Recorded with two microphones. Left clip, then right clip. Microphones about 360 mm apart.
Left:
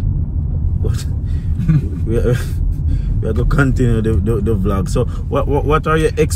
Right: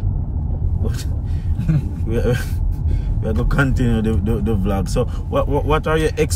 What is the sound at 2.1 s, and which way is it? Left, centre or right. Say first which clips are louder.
Speech: left 3 dB; centre.